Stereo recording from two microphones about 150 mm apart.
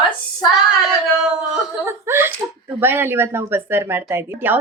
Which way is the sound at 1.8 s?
15° right (ahead or behind).